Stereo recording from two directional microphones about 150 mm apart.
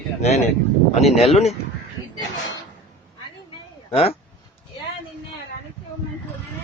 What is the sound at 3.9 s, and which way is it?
Speech, 40° left (ahead or behind).